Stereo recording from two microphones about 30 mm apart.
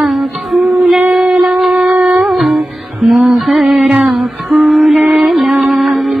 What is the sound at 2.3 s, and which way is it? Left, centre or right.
Music, centre.